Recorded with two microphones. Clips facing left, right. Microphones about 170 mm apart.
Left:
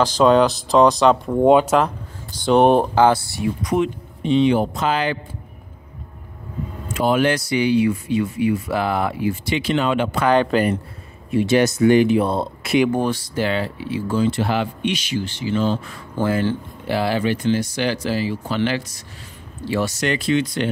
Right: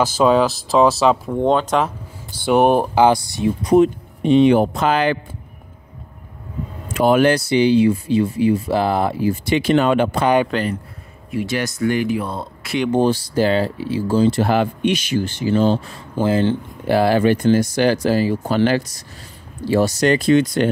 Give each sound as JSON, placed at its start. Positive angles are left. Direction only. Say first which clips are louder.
{"t": 0.0, "sound": "speech", "louder": "left 1 dB", "side_deg": -5}
{"t": 1.4, "sound": "speech", "louder": "left 4 dB", "side_deg": 10}
{"t": 2.3, "sound": "speech", "louder": "even", "side_deg": -5}
{"t": 4.2, "sound": "speech", "louder": "right 4 dB", "side_deg": -55}
{"t": 6.9, "sound": "speech", "louder": "right 4 dB", "side_deg": -55}
{"t": 7.3, "sound": "speech", "louder": "right 4 dB", "side_deg": -30}
{"t": 10.2, "sound": "speech", "louder": "left 1 dB", "side_deg": -10}
{"t": 11.2, "sound": "speech", "louder": "left 6 dB", "side_deg": 25}
{"t": 12.9, "sound": "speech", "louder": "right 5 dB", "side_deg": -30}
{"t": 16.2, "sound": "speech", "louder": "right 3 dB", "side_deg": -25}
{"t": 16.8, "sound": "speech", "louder": "right 6 dB", "side_deg": -45}